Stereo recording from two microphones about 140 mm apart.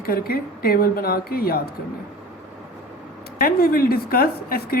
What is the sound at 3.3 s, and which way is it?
A woman's voice, 90° left.